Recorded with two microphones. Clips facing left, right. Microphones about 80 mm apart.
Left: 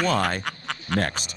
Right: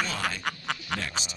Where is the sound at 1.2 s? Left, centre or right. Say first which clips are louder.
Even; left.